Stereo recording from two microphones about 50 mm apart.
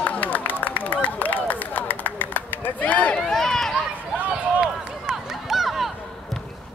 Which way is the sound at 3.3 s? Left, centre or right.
Centre.